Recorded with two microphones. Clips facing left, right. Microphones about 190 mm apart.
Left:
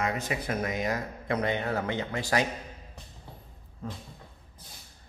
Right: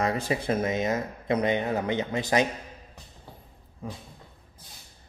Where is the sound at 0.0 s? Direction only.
30° right (ahead or behind).